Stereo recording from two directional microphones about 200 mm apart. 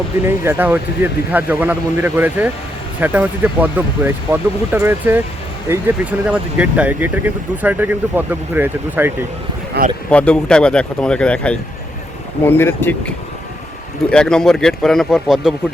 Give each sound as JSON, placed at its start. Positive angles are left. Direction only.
{"t": 0.3, "sound": "speech", "side_deg": -10}
{"t": 9.8, "sound": "a man's voice", "side_deg": -55}
{"t": 10.1, "sound": "speech", "side_deg": 5}